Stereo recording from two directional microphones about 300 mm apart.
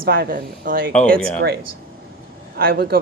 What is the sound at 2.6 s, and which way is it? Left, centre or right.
Speech, right.